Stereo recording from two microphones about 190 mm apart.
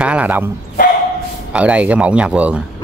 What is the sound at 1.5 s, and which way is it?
Speech, 5° right (ahead or behind).